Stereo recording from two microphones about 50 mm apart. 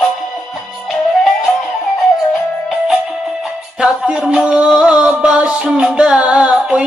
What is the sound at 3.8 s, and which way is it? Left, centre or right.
Music, right.